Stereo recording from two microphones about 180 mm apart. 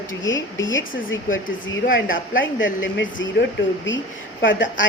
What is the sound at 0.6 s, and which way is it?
Speech, 90° left.